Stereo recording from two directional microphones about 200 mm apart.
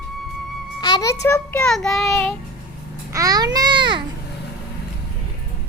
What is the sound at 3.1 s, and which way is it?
Babbling, 15° right (ahead or behind).